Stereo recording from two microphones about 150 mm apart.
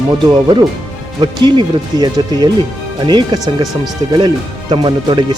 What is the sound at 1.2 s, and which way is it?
Speech, 30° right (ahead or behind).